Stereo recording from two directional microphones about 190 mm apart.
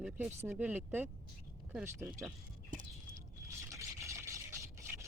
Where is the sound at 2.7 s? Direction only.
45° right (ahead or behind).